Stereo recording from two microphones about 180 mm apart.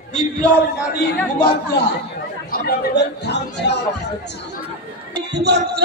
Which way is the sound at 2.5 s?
60° left (ahead or behind).